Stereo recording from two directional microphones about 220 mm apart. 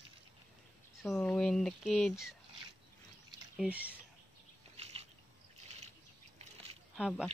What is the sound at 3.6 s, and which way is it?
Speech, 5° right (ahead or behind).